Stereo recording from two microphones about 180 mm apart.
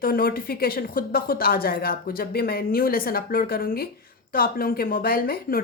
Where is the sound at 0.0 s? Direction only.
55° left (ahead or behind).